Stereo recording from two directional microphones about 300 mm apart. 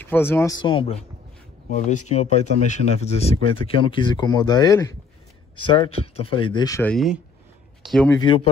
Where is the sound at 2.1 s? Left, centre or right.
Left.